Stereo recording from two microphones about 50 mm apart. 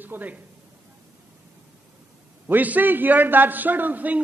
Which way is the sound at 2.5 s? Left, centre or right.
Right.